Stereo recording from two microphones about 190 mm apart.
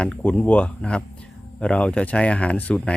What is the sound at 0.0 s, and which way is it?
Speech, 5° left (ahead or behind).